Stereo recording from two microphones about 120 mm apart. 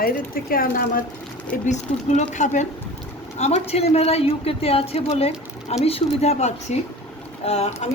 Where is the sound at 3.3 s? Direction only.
65° left (ahead or behind).